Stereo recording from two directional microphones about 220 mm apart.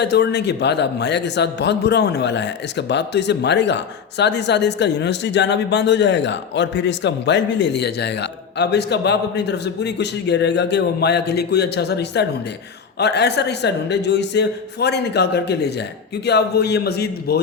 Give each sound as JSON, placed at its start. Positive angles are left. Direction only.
{"t": 0.0, "sound": "speech", "side_deg": 50}